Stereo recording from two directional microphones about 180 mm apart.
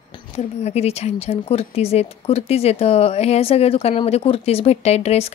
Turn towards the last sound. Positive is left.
turn(degrees=35)  # may be behind; listen again after turning